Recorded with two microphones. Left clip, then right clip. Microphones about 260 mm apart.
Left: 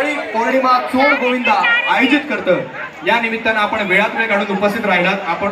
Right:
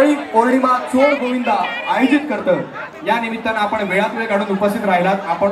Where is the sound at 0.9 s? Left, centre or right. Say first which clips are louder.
Left 1 dB; centre.